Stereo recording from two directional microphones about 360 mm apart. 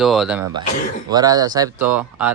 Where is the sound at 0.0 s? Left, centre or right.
Centre.